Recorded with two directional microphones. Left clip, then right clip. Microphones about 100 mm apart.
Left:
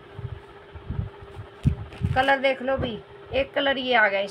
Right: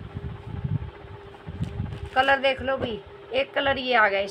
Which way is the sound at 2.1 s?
20° right (ahead or behind).